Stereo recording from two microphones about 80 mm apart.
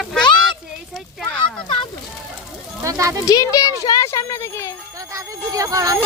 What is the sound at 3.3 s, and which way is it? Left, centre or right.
A child's voice, left.